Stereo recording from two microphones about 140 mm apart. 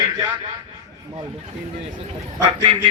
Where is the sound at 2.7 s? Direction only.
40° right (ahead or behind).